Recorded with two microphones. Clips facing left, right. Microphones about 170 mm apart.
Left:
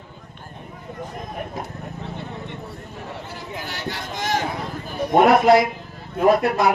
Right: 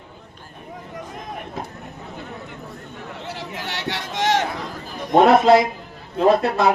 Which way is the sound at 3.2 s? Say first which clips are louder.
Right 2 dB; 80° right.